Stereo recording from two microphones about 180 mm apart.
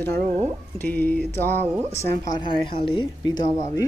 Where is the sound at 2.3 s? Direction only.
30° left (ahead or behind).